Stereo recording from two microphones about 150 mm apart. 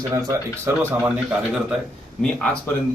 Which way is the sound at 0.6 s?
15° right (ahead or behind).